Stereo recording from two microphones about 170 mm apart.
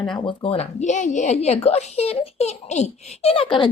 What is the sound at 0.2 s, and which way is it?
A child's voice, 30° left (ahead or behind).